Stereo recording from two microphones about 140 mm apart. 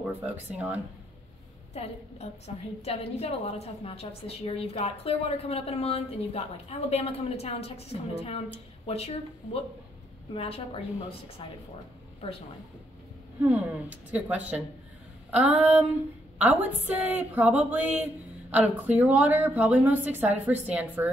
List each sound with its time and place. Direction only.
1.7 s a woman's voice: 50° left (ahead or behind)
13.4 s a woman's voice: 10° right (ahead or behind)